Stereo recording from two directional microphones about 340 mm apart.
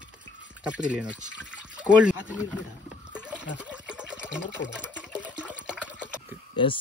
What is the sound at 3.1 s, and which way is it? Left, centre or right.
Water, centre.